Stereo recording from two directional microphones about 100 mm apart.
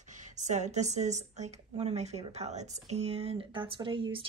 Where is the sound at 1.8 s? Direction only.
90° right.